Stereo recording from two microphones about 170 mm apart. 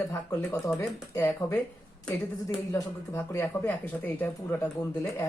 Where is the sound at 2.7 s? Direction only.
20° left (ahead or behind).